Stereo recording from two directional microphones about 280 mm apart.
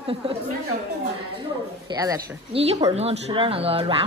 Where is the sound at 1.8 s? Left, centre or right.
Centre.